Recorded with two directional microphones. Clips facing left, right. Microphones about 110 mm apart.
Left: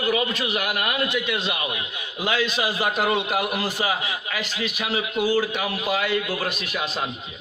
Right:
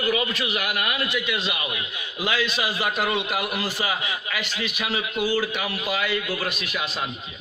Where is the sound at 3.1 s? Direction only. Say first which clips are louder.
Left 3 dB; 40° left (ahead or behind).